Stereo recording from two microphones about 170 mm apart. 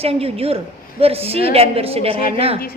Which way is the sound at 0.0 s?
35° right (ahead or behind).